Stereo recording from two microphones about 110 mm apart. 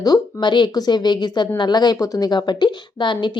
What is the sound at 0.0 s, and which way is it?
Speech, 40° left (ahead or behind).